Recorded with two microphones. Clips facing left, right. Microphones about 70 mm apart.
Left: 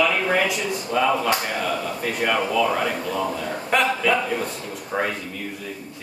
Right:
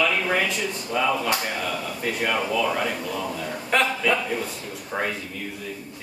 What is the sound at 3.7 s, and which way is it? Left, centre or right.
A man's voice, centre.